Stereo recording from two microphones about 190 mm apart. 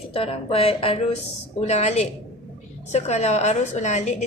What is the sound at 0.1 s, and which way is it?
A woman's voice, 30° left (ahead or behind).